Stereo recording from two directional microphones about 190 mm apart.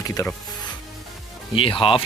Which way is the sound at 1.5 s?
30° left (ahead or behind).